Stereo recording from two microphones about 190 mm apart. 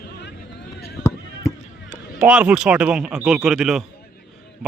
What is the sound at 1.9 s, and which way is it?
Speech, 5° right (ahead or behind).